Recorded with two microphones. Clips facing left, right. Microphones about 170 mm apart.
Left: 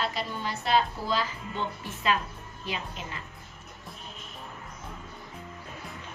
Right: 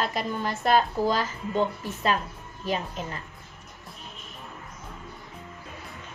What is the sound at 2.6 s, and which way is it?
Speech, 40° right (ahead or behind).